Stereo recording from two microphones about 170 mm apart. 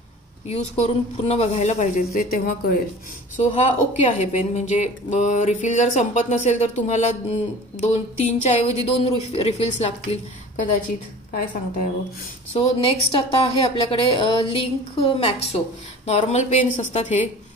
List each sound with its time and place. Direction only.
0.5 s a woman's voice: 35° left (ahead or behind); by 2.5 s 60° left (ahead or behind)
3.3 s a woman's voice: 45° left (ahead or behind)
11.3 s a woman's voice: 55° left (ahead or behind)
12.5 s a woman's voice: 35° left (ahead or behind)